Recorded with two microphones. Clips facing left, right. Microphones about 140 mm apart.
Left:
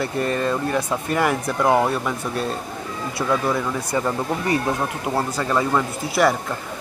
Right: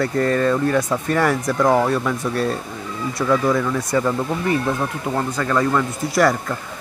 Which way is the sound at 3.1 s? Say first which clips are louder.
Right 3 dB; 5° left (ahead or behind).